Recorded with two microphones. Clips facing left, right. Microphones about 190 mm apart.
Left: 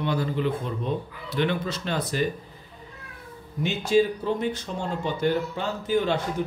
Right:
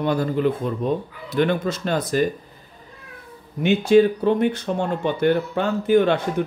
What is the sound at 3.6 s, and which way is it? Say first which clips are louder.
Speech: right 7 dB; 60° right (ahead or behind).